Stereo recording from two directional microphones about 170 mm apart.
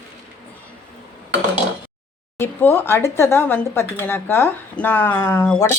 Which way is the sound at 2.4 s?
10° left (ahead or behind).